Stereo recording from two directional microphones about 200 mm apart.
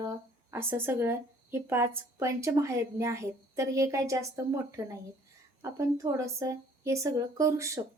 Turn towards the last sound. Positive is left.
turn(degrees=-15)  # may be behind; listen again after turning